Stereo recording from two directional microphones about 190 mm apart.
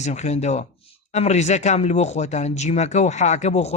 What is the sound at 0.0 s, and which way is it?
Speech, 35° left (ahead or behind).